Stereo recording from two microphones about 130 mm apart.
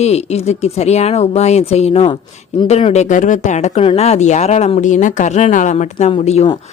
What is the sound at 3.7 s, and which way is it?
A woman's voice, 50° left (ahead or behind).